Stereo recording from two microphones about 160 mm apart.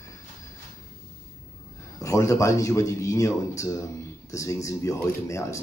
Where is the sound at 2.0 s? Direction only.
20° left (ahead or behind).